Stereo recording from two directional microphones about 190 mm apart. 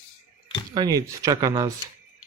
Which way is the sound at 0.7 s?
20° right (ahead or behind).